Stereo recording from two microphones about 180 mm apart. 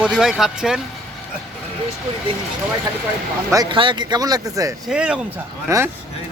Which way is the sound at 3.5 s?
25° right (ahead or behind).